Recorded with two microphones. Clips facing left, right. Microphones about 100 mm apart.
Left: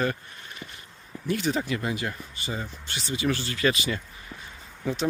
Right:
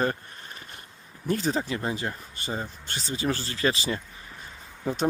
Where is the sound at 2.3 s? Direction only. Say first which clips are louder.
Right 1 dB; 45° right (ahead or behind).